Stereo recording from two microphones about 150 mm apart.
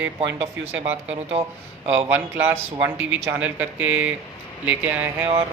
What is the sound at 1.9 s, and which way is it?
Speech, 15° right (ahead or behind).